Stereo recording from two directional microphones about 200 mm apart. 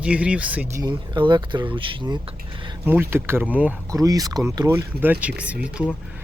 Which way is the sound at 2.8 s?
10° right (ahead or behind).